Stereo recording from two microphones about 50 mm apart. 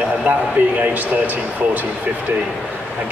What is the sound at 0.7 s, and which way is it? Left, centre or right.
A man's voice, right.